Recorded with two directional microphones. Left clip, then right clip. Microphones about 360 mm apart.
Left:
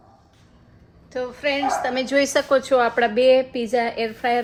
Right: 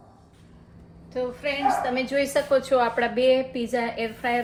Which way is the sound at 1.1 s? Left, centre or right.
Left.